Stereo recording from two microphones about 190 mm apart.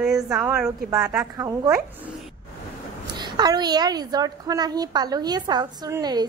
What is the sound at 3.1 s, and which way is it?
A woman's voice, 25° right (ahead or behind).